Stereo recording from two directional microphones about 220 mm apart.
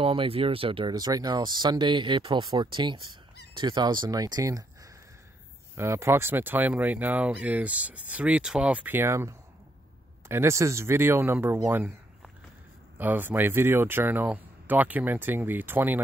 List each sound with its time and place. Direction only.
0.0 s speech: 25° right (ahead or behind)
5.8 s speech: 10° right (ahead or behind)
12.9 s speech: 10° right (ahead or behind)